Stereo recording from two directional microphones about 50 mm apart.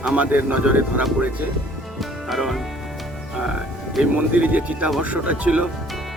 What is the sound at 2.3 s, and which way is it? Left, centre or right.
Music, centre.